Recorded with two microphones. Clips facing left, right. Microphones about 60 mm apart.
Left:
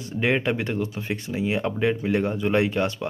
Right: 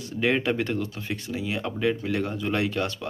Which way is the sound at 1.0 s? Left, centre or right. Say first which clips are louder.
Left 4 dB; left.